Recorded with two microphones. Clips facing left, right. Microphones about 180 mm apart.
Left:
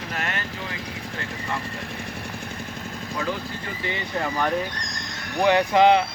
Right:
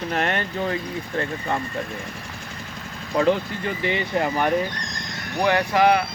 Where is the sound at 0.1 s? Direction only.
45° right (ahead or behind).